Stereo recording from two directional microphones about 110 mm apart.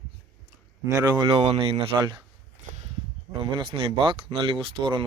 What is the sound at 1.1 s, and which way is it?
Speech, 60° right (ahead or behind).